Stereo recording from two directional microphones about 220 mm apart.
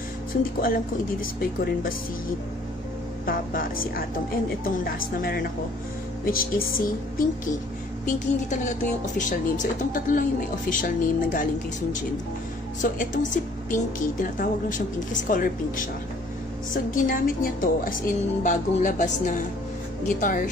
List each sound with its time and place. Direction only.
0.4 s a woman's voice: 40° left (ahead or behind)
3.3 s a woman's voice: 40° left (ahead or behind)
8.0 s a woman's voice: 35° left (ahead or behind)
12.8 s a woman's voice: 35° left (ahead or behind)